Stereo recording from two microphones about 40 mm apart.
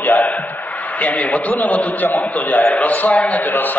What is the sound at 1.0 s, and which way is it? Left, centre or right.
A man's voice, left.